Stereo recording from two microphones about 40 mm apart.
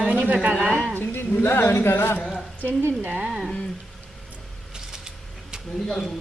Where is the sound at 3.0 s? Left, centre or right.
Right.